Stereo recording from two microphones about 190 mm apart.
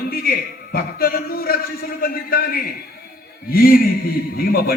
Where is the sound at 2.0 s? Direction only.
50° left (ahead or behind).